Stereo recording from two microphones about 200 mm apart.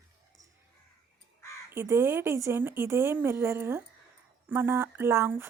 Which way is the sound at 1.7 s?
10° right (ahead or behind).